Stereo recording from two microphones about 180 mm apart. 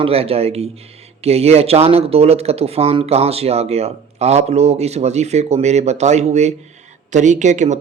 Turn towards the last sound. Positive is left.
turn(degrees=-40)  # may be behind; listen again after turning